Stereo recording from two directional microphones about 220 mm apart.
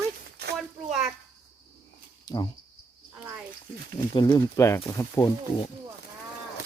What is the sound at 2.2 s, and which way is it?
Cricket, 20° left (ahead or behind).